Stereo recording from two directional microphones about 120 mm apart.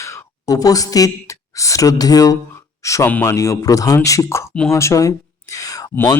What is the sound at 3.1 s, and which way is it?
Speech, 20° left (ahead or behind).